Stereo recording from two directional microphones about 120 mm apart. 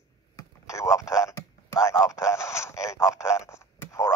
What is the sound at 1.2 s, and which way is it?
Radio, 25° left (ahead or behind).